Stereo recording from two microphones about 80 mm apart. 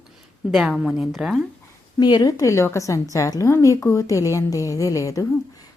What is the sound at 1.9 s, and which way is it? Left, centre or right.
A woman's voice, left.